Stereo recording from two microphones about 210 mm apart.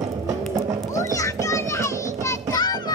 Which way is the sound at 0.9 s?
15° left (ahead or behind).